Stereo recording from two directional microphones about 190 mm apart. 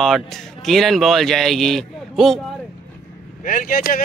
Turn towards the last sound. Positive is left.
turn(degrees=50)  # may be behind; listen again after turning